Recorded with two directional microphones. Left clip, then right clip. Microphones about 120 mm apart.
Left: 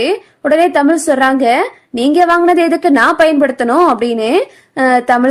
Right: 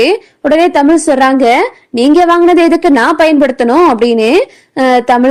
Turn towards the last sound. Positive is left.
turn(degrees=-30)  # may be behind; listen again after turning